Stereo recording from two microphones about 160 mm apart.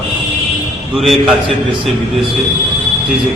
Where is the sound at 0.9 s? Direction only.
Centre (ahead or behind).